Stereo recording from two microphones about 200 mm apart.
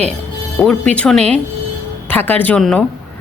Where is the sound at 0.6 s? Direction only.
5° left (ahead or behind).